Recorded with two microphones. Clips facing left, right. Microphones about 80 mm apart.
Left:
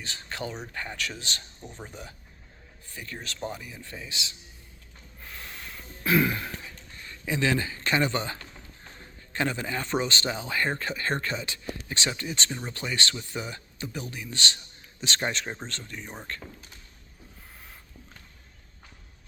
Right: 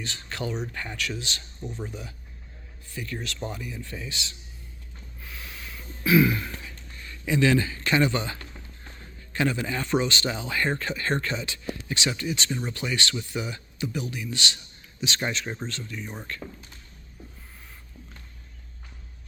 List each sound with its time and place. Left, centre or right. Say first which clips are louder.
0.0 s speech: right 2 dB; left
2.9 s speech: right 5 dB; left
5.2 s snort: even; left
6.1 s throat clearing: right 4 dB; left
7.0 s speech: right 4 dB; left
12.5 s speech: right 4 dB; centre; by 16.4 s left